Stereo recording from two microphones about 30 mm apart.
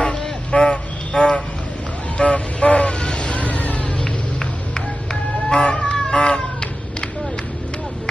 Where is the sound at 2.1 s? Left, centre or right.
Left.